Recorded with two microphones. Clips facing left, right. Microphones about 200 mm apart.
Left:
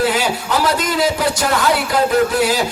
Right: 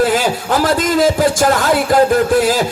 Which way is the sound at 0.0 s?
50° right (ahead or behind).